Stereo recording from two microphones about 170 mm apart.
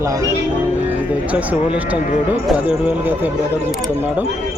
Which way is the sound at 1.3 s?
10° right (ahead or behind).